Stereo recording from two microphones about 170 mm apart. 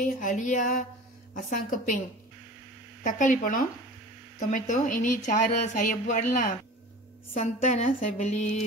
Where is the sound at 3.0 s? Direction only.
50° left (ahead or behind).